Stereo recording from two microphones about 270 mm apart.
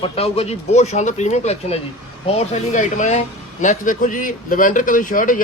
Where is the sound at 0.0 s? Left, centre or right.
Left.